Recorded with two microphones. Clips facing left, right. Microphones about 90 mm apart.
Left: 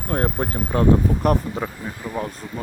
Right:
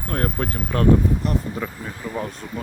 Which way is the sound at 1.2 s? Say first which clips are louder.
Left 5 dB; 60° left (ahead or behind).